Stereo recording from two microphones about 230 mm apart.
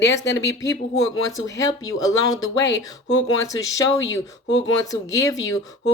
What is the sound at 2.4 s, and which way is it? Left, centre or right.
A woman's voice, left.